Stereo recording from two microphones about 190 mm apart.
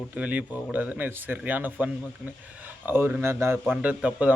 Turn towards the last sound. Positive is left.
turn(degrees=-5)  # may be behind; listen again after turning